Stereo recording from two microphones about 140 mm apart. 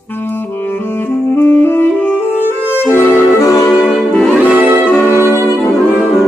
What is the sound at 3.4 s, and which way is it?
Music, 25° left (ahead or behind).